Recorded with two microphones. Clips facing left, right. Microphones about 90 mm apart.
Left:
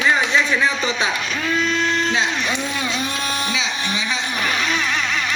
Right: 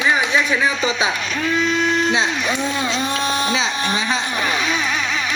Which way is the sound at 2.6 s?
25° right (ahead or behind).